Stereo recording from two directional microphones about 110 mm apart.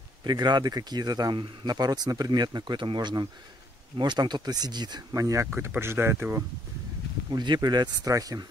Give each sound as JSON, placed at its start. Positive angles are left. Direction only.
{"t": 0.2, "sound": "speech", "side_deg": -40}
{"t": 5.5, "sound": "speech", "side_deg": -20}
{"t": 7.2, "sound": "speech", "side_deg": -40}